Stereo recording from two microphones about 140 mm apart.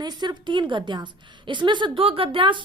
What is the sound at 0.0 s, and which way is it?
A woman's voice, 30° right (ahead or behind).